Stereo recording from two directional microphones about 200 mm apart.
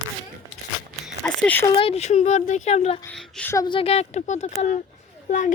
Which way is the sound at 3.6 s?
25° left (ahead or behind).